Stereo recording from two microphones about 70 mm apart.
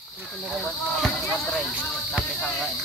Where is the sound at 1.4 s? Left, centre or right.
Left.